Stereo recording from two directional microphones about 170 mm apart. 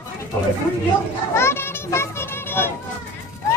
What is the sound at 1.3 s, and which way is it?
Children playing, 15° left (ahead or behind).